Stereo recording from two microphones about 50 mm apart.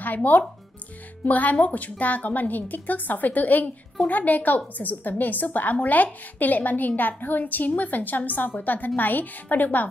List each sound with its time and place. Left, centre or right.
0.0 s a woman's voice: left